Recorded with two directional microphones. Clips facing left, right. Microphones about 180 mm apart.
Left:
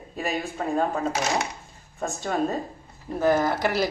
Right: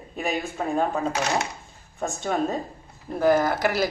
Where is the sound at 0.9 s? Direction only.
10° right (ahead or behind).